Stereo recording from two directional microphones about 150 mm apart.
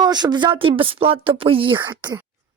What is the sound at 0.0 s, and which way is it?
Speech, 30° right (ahead or behind).